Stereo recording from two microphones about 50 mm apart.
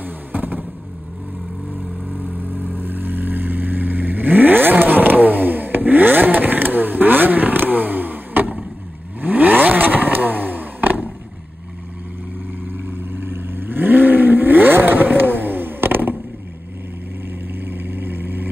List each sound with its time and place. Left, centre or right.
0.0 s vehicle: right
2.0 s vehicle: right
12.6 s vehicle: right
17.3 s vehicle: right